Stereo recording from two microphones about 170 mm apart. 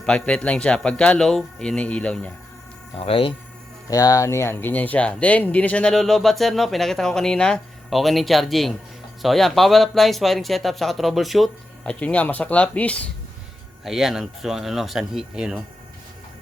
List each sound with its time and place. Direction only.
0.0 s speech: 5° left (ahead or behind)
2.9 s speech: 35° left (ahead or behind)
3.8 s speech: 20° left (ahead or behind); by 15.6 s 5° right (ahead or behind)